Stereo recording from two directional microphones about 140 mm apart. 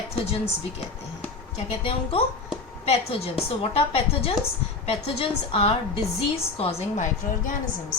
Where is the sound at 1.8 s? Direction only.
45° left (ahead or behind).